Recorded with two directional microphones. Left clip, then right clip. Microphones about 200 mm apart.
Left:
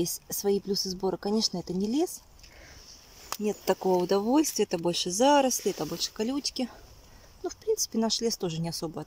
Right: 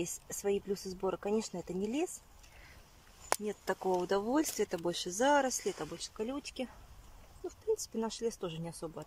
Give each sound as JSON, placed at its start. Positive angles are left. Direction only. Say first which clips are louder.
{"t": 0.0, "sound": "speech", "louder": "left 7 dB", "side_deg": 25}
{"t": 1.5, "sound": "speech", "louder": "left 6 dB", "side_deg": 15}
{"t": 3.3, "sound": "speech", "louder": "left 9 dB", "side_deg": 15}
{"t": 7.4, "sound": "speech", "louder": "left 6 dB", "side_deg": 15}